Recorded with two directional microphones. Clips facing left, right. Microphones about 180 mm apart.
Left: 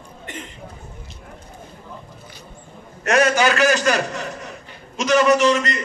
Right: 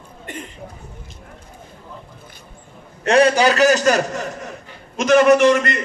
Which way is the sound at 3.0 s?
30° right (ahead or behind).